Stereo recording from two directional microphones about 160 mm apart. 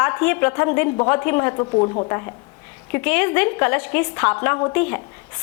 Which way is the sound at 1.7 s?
35° left (ahead or behind).